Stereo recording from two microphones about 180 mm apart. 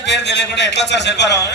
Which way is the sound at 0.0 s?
75° left (ahead or behind).